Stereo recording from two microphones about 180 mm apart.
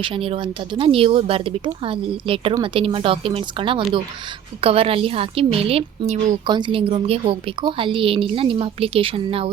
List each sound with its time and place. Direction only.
0.0 s a woman's voice: 30° right (ahead or behind)